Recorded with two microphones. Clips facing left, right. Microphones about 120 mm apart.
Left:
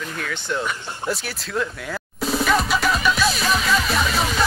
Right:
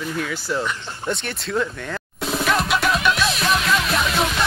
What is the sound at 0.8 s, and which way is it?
Music, 5° left (ahead or behind).